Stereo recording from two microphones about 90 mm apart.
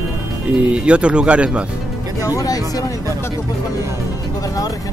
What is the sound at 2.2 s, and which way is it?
Speech, 40° left (ahead or behind).